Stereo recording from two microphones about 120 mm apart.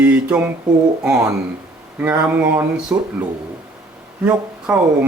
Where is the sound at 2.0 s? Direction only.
15° right (ahead or behind).